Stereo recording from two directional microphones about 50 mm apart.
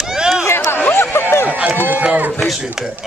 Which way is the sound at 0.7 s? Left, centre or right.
Left.